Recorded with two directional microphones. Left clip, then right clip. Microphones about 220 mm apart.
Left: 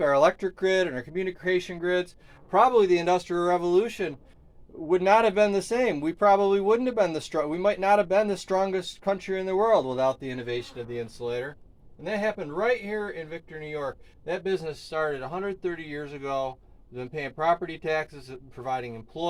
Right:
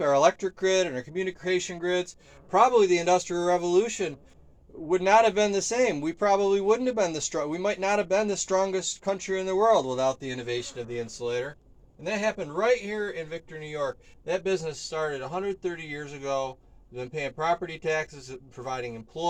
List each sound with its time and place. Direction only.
0.0 s speech: 35° left (ahead or behind)
12.0 s speech: 15° left (ahead or behind)
14.3 s speech: 30° left (ahead or behind)